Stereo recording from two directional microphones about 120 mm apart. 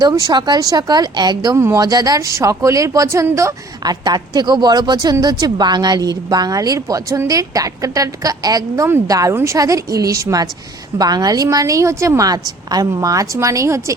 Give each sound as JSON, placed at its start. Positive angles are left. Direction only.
{"t": 0.0, "sound": "speech", "side_deg": -30}